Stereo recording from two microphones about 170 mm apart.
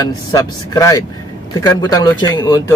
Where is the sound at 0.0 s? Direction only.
20° left (ahead or behind).